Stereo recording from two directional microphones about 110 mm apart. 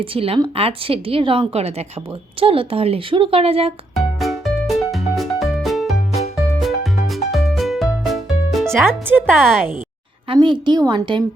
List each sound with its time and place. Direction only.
0.0 s a woman's voice: 55° right (ahead or behind)
3.9 s music: centre (ahead or behind)
8.6 s speech: 20° right (ahead or behind)
9.2 s speech: 5° left (ahead or behind)
10.3 s a woman's voice: 45° right (ahead or behind)